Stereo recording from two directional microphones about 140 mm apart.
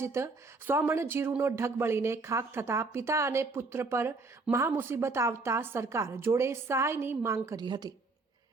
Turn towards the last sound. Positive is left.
turn(degrees=-30)  # may be behind; listen again after turning